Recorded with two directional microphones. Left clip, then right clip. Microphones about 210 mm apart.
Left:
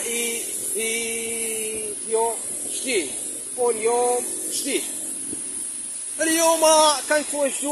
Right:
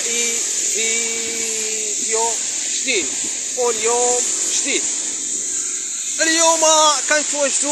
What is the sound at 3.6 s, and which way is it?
Speech, 5° left (ahead or behind).